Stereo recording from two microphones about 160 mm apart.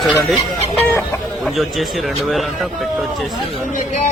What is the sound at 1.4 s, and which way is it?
Speech, centre (ahead or behind).